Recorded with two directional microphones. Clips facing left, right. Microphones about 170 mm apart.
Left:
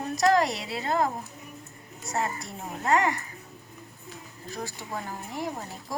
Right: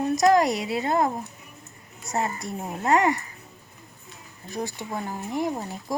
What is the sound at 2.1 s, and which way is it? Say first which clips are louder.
Speech: right 3 dB; 20° right (ahead or behind).